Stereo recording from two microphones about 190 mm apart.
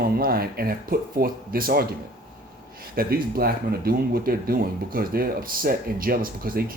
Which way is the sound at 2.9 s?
50° right (ahead or behind).